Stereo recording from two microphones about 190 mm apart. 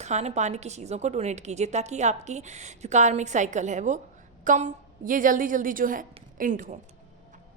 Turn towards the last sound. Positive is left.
turn(degrees=-45)  # may be behind; listen again after turning